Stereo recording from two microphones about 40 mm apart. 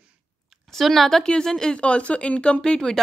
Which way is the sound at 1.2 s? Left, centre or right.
Centre.